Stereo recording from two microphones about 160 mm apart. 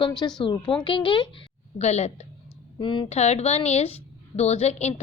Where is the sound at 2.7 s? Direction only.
30° left (ahead or behind).